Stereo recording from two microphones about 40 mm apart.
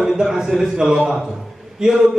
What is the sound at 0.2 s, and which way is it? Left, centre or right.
A man's voice, centre.